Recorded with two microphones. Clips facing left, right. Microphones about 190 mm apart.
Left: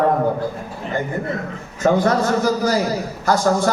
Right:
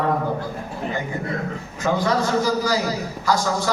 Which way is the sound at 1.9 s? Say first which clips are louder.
Left 4 dB; 55° left (ahead or behind).